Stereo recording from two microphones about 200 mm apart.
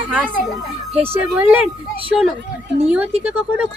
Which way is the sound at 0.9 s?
30° right (ahead or behind).